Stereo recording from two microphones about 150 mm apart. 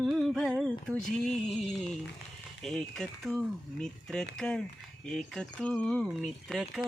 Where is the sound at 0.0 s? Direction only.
Centre (ahead or behind).